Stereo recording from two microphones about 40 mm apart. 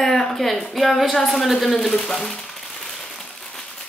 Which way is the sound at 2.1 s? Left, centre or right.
Centre.